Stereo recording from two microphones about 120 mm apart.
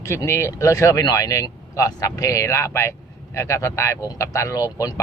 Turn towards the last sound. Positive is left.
turn(degrees=30)  # may be behind; listen again after turning